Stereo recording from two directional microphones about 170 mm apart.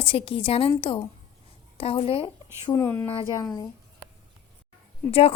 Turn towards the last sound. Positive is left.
turn(degrees=35)  # may be behind; listen again after turning